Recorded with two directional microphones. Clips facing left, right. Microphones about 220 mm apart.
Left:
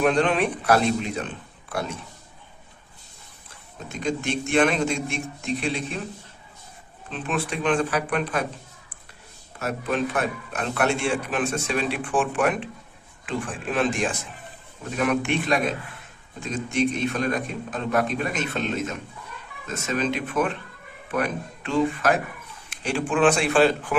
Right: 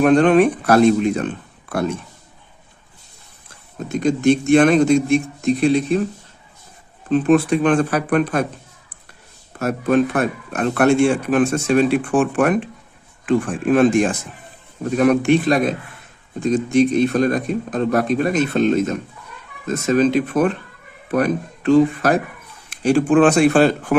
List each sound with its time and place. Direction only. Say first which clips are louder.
0.0 s speech: right 9 dB; 50° right (ahead or behind)
4.0 s speech: right 11 dB; 40° right (ahead or behind)
7.1 s speech: right 14 dB; 45° right (ahead or behind)
9.6 s speech: right 9 dB; 45° right (ahead or behind)